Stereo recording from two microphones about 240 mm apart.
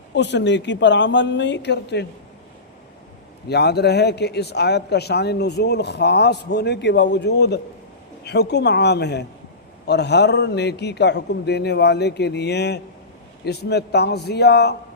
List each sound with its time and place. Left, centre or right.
0.1 s a man's voice: left
3.5 s a man's voice: left